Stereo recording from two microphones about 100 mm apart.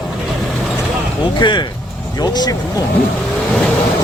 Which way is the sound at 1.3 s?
50° left (ahead or behind).